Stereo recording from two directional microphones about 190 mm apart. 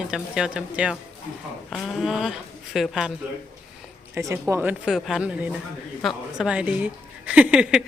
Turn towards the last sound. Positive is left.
turn(degrees=-5)  # may be behind; listen again after turning